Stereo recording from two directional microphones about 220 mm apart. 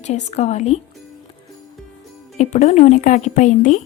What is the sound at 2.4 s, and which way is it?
A woman's voice, 30° left (ahead or behind).